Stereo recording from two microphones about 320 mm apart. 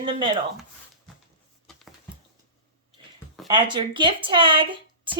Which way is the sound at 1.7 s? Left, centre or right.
Centre.